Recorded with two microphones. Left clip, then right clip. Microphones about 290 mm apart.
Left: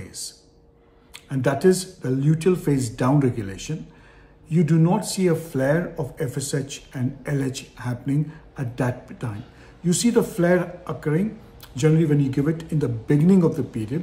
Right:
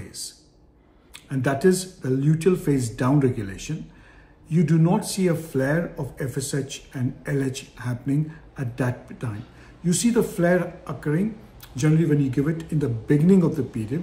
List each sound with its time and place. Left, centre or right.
1.1 s speech: centre